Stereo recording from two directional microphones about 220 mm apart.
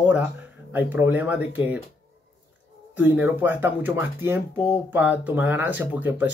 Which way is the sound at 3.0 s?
5° right (ahead or behind).